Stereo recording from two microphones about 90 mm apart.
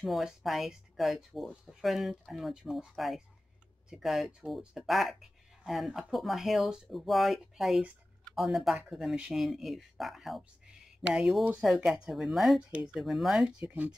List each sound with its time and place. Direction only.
0.0 s speech: centre (ahead or behind)
13.7 s speech: 15° right (ahead or behind)